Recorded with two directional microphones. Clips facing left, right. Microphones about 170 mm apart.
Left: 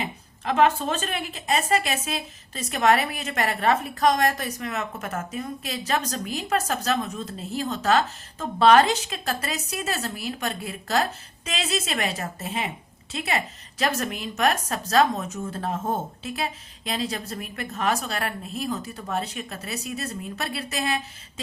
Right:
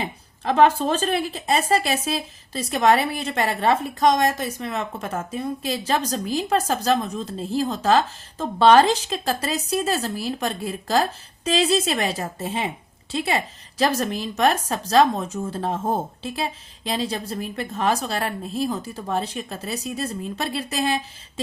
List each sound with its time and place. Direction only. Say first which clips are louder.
0.0 s a woman's voice: right 3 dB; 35° right (ahead or behind)